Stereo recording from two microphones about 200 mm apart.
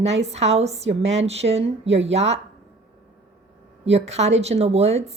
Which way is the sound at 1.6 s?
65° right (ahead or behind).